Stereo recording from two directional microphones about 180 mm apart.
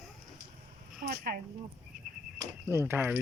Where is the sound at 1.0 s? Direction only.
55° right (ahead or behind).